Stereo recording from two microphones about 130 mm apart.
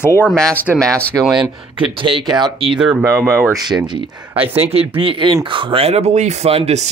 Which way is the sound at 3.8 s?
35° right (ahead or behind).